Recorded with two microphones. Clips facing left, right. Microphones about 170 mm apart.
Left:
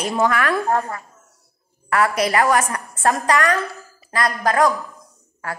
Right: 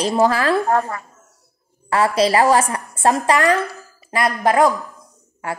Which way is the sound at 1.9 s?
30° right (ahead or behind).